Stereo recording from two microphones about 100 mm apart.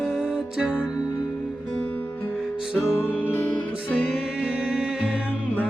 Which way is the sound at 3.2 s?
20° left (ahead or behind).